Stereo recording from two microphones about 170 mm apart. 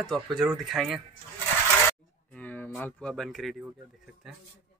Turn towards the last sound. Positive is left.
turn(degrees=0)  # may be behind; listen again after turning